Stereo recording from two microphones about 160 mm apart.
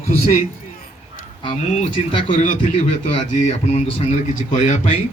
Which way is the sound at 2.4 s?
55° left (ahead or behind).